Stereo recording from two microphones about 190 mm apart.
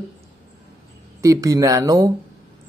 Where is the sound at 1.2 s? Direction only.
15° right (ahead or behind).